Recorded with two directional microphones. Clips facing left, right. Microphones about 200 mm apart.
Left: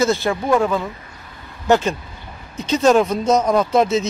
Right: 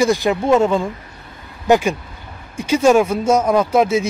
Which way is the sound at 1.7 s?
10° right (ahead or behind).